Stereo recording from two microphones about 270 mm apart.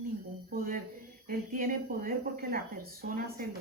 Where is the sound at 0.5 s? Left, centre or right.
Right.